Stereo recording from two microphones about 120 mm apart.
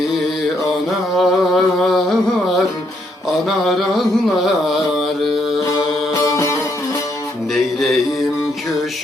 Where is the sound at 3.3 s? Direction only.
Centre (ahead or behind).